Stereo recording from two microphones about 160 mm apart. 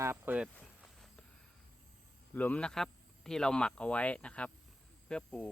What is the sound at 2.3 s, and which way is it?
Speech, 10° left (ahead or behind).